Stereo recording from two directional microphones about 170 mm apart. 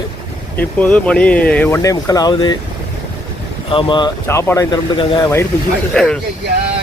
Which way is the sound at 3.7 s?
30° left (ahead or behind).